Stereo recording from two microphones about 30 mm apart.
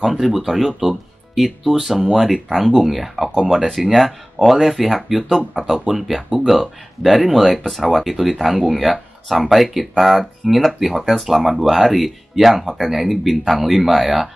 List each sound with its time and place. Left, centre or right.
0.0 s speech: centre
3.3 s speech: centre
3.8 s speech: centre